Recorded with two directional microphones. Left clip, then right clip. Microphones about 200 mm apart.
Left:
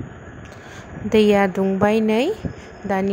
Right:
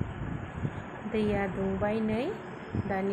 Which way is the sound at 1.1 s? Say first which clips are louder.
Left 15 dB; 50° left (ahead or behind).